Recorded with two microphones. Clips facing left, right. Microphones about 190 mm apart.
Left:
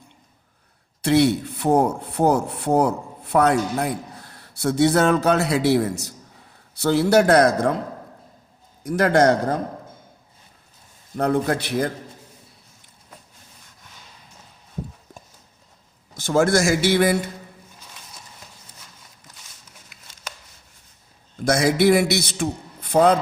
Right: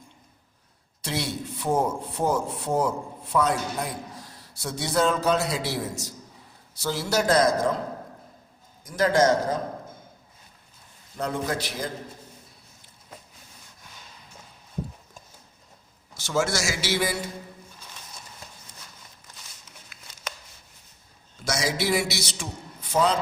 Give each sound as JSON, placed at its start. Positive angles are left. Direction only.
{"t": 1.0, "sound": "speech", "side_deg": 65}
{"t": 8.8, "sound": "speech", "side_deg": 65}
{"t": 11.2, "sound": "speech", "side_deg": 60}
{"t": 16.1, "sound": "speech", "side_deg": 55}
{"t": 21.3, "sound": "a man's voice", "side_deg": 55}